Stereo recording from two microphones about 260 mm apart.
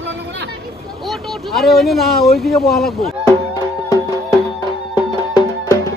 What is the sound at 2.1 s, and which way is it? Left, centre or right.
Speech, left.